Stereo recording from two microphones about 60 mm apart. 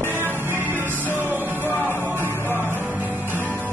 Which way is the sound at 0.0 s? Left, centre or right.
Right.